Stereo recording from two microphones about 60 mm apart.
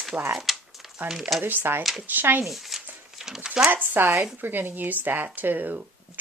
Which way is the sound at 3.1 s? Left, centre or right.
Centre.